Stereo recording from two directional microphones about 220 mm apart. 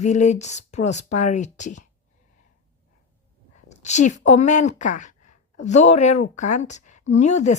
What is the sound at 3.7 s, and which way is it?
A woman's voice, 30° left (ahead or behind).